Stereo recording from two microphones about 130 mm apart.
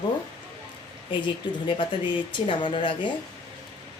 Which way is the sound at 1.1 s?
40° left (ahead or behind).